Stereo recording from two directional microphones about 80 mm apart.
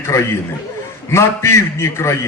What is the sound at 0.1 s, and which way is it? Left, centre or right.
A man's voice, left.